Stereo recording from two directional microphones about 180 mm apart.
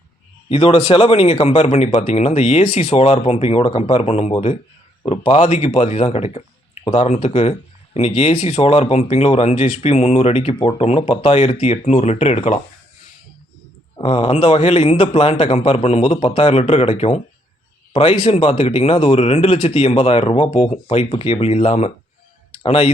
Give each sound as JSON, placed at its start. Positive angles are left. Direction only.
{"t": 0.5, "sound": "speech", "side_deg": 30}
{"t": 13.9, "sound": "speech", "side_deg": 30}